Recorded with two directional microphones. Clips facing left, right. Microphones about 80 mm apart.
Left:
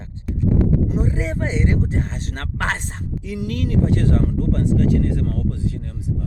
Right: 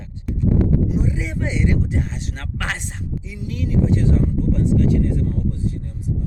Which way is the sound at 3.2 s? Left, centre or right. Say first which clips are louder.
Left 6 dB; left.